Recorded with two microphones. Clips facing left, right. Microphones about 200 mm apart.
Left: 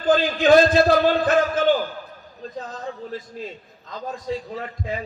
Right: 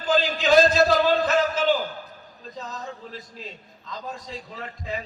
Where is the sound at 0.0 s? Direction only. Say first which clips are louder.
Left 5 dB; 55° left (ahead or behind).